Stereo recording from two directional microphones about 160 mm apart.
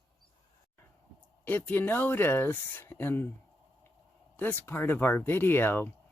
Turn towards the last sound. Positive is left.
turn(degrees=15)  # may be behind; listen again after turning